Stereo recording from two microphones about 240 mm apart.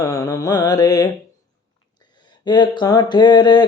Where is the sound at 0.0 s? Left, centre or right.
Centre.